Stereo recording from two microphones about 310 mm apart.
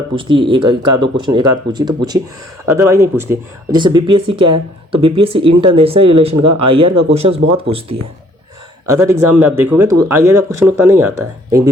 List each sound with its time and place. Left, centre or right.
0.2 s speech: centre
6.0 s speech: right
6.7 s speech: centre